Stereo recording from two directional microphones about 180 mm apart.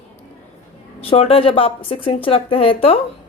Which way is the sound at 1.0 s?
35° left (ahead or behind).